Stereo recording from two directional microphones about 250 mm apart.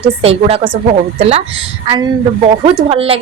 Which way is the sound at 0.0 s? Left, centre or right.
Right.